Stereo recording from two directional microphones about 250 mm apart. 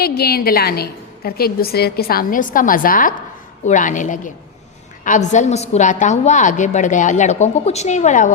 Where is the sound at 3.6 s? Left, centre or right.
Left.